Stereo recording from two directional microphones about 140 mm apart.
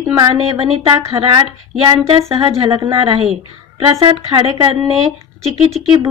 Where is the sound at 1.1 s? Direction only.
30° right (ahead or behind).